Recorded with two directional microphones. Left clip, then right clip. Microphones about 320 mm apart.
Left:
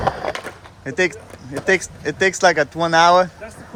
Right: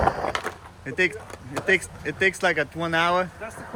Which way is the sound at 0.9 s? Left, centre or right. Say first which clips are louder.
Left 4 dB; centre.